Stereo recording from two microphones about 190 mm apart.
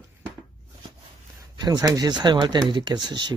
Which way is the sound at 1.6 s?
20° right (ahead or behind).